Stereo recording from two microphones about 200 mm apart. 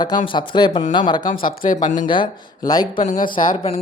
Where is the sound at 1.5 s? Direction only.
40° left (ahead or behind).